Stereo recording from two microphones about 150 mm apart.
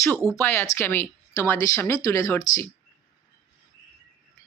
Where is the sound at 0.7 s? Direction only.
15° left (ahead or behind).